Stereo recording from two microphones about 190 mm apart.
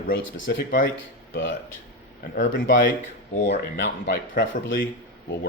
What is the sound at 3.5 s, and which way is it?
Speech, 65° left (ahead or behind).